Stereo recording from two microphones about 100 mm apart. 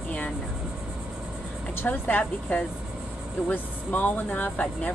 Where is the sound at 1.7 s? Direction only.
20° left (ahead or behind).